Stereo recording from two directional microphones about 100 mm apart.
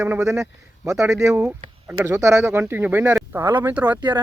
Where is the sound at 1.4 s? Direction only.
20° right (ahead or behind).